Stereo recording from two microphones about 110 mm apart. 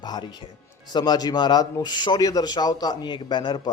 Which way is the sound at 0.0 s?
40° left (ahead or behind).